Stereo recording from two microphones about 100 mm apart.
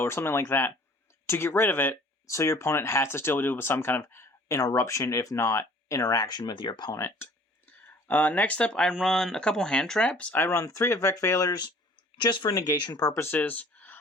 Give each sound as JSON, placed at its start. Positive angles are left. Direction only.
{"t": 0.0, "sound": "speech", "side_deg": 25}
{"t": 6.9, "sound": "speech", "side_deg": 25}
{"t": 7.9, "sound": "speech", "side_deg": 15}
{"t": 13.3, "sound": "a sound", "side_deg": 15}